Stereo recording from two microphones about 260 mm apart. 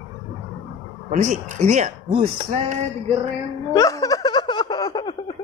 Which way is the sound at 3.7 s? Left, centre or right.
Centre.